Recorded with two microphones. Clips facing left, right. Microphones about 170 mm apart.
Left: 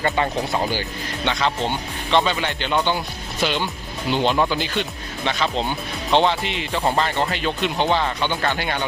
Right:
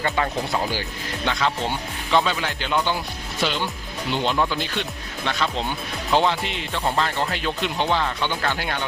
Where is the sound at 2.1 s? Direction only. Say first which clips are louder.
Left 2 dB; centre (ahead or behind).